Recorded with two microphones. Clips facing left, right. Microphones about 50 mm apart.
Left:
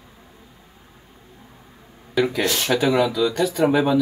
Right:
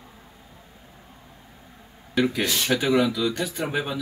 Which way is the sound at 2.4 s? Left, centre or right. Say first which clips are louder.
Left 3 dB; left.